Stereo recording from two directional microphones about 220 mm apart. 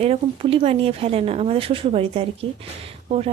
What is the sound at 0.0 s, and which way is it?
Speech, 25° right (ahead or behind).